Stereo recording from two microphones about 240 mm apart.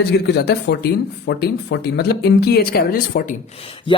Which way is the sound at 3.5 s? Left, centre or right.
Left.